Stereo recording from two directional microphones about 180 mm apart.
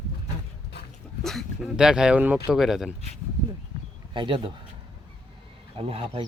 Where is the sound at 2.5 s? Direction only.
Centre (ahead or behind).